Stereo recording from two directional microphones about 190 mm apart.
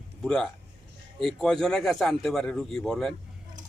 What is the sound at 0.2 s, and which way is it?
A man's voice, 5° left (ahead or behind).